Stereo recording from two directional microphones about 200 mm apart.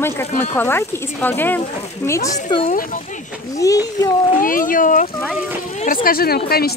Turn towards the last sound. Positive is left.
turn(degrees=50)  # may be behind; listen again after turning